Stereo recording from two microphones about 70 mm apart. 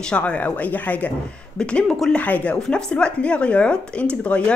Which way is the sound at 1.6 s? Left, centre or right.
Centre.